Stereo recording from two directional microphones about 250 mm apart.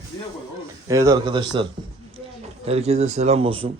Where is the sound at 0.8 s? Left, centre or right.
Centre.